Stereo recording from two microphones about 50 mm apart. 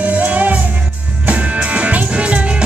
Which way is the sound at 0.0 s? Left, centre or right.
Right.